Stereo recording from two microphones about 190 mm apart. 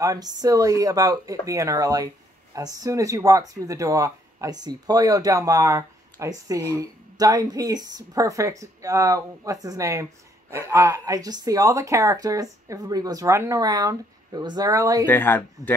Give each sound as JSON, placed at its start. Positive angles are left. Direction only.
{"t": 0.0, "sound": "speech", "side_deg": -20}
{"t": 15.0, "sound": "speech", "side_deg": 10}